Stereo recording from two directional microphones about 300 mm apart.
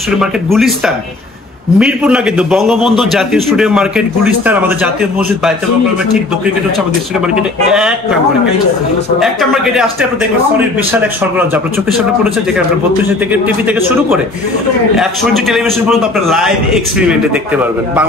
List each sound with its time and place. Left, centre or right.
0.2 s a man's voice: centre
7.3 s a man's voice: centre
9.2 s a man's voice: centre
10.9 s a man's voice: centre
13.3 s a man's voice: centre